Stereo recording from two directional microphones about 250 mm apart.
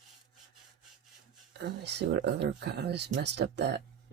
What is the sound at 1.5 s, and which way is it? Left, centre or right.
Speech, right.